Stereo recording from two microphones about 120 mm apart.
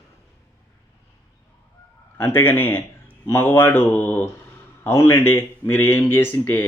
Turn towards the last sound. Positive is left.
turn(degrees=15)  # may be behind; listen again after turning